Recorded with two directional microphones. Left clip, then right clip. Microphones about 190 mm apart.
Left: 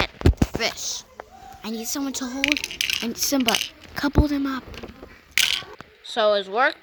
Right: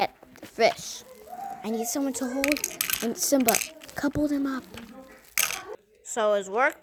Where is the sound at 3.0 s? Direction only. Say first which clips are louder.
Left 1 dB; 35° left (ahead or behind).